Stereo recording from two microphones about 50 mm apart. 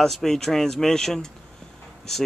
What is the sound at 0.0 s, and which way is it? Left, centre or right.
Speech, centre.